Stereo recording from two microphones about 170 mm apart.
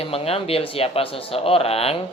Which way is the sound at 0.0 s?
35° left (ahead or behind).